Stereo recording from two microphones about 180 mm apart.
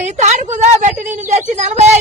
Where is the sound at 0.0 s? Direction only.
40° right (ahead or behind).